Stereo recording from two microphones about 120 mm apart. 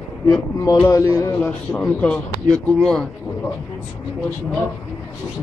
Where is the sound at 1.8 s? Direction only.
10° left (ahead or behind).